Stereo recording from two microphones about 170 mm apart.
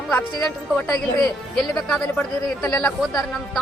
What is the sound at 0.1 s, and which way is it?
A woman's voice, 10° left (ahead or behind).